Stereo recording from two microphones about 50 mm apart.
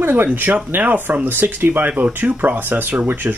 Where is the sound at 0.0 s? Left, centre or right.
Right.